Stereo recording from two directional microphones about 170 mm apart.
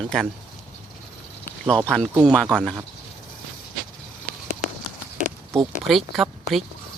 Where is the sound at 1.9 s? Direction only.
5° left (ahead or behind).